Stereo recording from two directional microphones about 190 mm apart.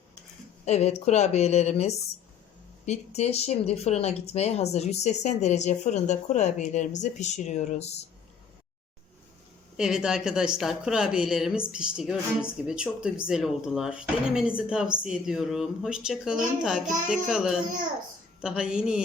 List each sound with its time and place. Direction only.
0.6 s speech: 35° left (ahead or behind)
9.7 s speech: 5° right (ahead or behind)